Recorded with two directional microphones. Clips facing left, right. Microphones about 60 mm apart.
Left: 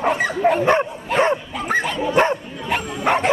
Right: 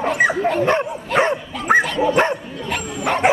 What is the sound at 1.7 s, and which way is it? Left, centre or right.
Bow-wow, centre.